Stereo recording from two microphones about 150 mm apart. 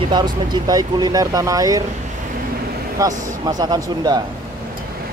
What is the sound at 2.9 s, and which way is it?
Speech, 25° right (ahead or behind).